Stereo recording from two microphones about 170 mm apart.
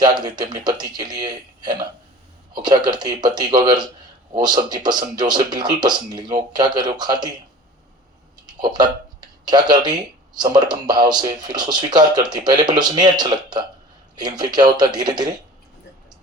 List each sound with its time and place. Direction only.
0.0 s speech: 25° right (ahead or behind)
8.4 s speech: 25° right (ahead or behind)